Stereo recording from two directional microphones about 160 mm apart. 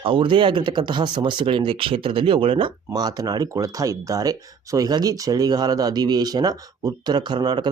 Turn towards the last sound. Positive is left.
turn(degrees=-25)  # may be behind; listen again after turning